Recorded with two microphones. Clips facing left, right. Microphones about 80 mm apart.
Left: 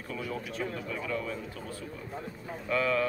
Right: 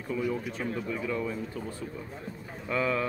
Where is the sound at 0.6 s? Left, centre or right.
Centre.